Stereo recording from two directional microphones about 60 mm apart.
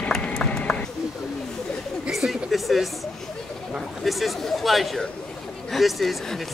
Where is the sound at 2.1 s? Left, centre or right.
Centre.